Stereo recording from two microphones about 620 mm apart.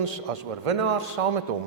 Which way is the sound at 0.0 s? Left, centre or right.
Right.